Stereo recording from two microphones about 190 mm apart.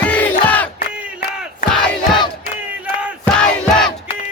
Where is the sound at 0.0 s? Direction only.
5° left (ahead or behind).